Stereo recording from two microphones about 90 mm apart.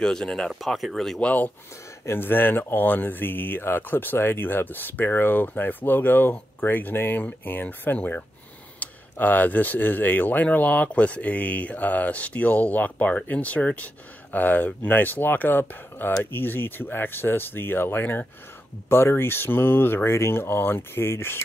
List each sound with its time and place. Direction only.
0.0 s speech: 5° left (ahead or behind)
1.2 s speech: 15° left (ahead or behind)